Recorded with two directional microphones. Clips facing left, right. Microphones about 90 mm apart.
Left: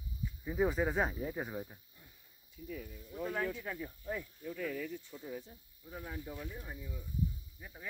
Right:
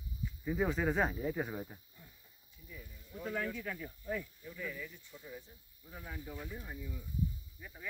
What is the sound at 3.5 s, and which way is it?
Speech, 25° left (ahead or behind).